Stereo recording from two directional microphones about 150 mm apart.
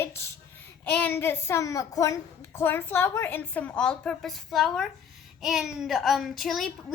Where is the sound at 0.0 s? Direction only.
15° left (ahead or behind).